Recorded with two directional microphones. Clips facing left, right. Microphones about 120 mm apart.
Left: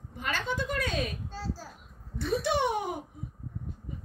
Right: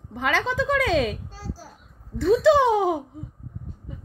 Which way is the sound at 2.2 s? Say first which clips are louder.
Right 11 dB; 90° right.